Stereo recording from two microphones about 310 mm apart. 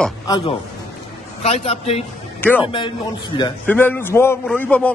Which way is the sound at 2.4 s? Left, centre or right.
Centre.